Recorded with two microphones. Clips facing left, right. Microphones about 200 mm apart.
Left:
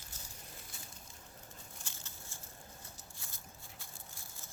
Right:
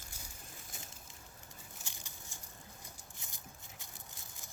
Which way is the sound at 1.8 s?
15° right (ahead or behind).